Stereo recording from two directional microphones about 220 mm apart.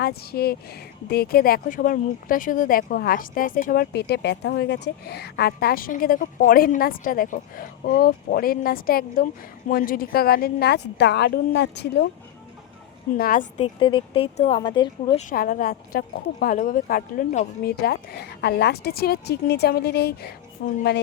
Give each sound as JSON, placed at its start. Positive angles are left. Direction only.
{"t": 0.0, "sound": "speech", "side_deg": 45}
{"t": 13.1, "sound": "speech", "side_deg": 40}
{"t": 13.7, "sound": "speech", "side_deg": 20}
{"t": 15.2, "sound": "speech", "side_deg": 40}